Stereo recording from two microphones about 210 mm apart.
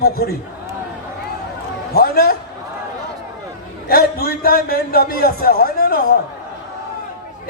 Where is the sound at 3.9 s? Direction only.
45° left (ahead or behind).